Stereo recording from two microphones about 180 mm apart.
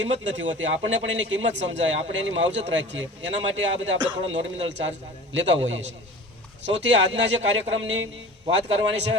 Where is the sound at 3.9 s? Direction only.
25° right (ahead or behind).